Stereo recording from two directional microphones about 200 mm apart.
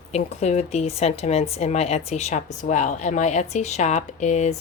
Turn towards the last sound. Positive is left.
turn(degrees=35)  # may be behind; listen again after turning